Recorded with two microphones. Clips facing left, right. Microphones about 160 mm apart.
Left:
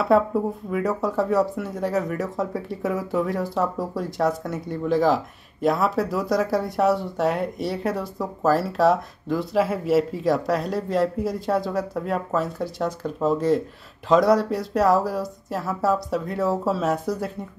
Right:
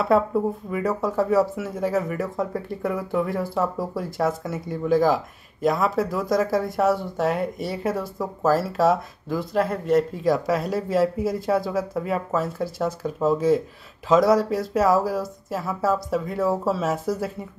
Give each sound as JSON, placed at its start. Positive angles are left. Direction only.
{"t": 0.1, "sound": "speech", "side_deg": 0}